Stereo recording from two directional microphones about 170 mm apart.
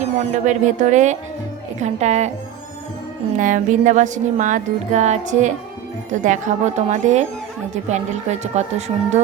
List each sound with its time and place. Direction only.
0.0 s a woman's voice: 45° right (ahead or behind)
3.3 s speech: 50° right (ahead or behind)